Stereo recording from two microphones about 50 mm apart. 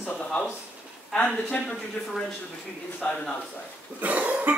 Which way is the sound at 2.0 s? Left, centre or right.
Left.